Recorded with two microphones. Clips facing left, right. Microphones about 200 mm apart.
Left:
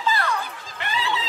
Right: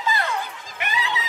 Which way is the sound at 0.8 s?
15° right (ahead or behind).